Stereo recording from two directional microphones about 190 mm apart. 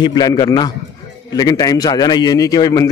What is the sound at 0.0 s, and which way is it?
A man's voice, 20° left (ahead or behind).